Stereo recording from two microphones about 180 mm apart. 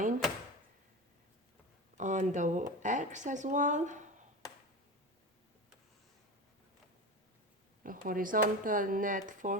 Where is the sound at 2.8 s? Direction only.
45° right (ahead or behind).